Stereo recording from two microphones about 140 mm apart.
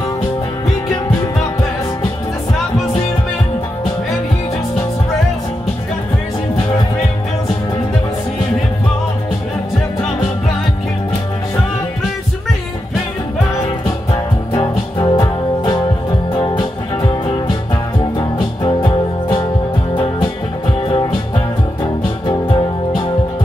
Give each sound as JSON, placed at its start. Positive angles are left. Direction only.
{"t": 14.5, "sound": "music", "side_deg": 30}
{"t": 18.6, "sound": "music", "side_deg": 35}
{"t": 22.2, "sound": "music", "side_deg": 35}